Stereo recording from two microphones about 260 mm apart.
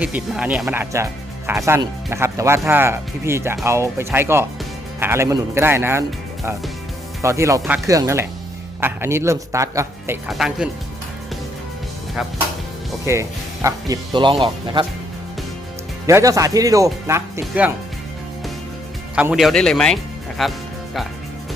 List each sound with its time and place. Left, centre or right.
0.0 s speech: centre
13.1 s speech: centre
16.0 s speech: centre
19.1 s speech: centre